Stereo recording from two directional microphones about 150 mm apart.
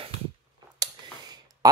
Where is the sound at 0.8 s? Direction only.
25° right (ahead or behind).